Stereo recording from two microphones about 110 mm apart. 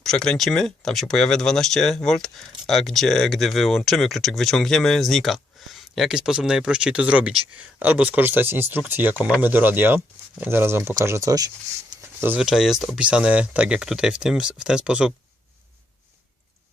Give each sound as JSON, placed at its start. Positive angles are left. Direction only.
{"t": 0.0, "sound": "speech", "side_deg": 5}
{"t": 12.4, "sound": "speech", "side_deg": -5}